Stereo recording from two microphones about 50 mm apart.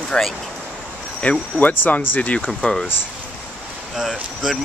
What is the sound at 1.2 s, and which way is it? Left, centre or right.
Speech, left.